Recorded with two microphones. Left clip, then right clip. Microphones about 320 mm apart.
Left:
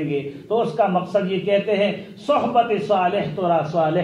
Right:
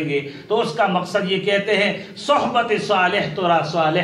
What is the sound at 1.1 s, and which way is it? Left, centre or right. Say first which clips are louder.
Speech: even; right.